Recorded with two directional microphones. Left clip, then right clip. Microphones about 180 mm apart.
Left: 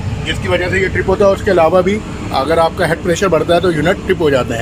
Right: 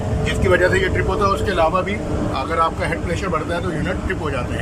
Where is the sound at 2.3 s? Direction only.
50° left (ahead or behind).